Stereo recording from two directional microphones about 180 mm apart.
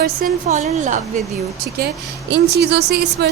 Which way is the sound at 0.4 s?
40° right (ahead or behind).